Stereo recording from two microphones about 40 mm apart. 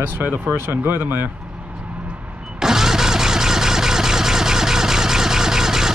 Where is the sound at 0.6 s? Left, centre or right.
Right.